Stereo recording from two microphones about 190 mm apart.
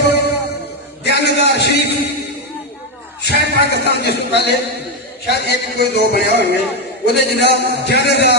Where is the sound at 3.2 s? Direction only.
60° left (ahead or behind).